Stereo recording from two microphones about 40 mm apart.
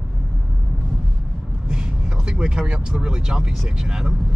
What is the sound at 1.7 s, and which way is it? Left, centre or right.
Speech, centre.